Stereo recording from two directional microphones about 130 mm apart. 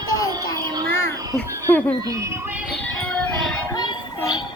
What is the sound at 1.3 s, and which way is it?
Speech, 15° left (ahead or behind).